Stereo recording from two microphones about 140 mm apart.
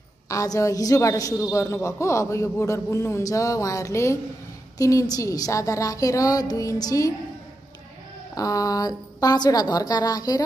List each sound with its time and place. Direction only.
0.3 s a man's voice: 25° left (ahead or behind)
8.4 s a man's voice: 25° left (ahead or behind)